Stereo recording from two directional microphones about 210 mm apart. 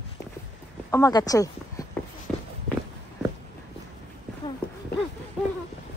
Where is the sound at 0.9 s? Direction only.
15° left (ahead or behind).